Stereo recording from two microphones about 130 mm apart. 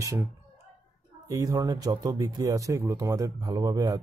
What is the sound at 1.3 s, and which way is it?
Speech, 25° right (ahead or behind).